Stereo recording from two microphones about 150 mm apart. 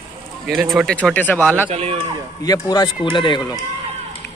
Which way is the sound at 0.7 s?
Centre (ahead or behind).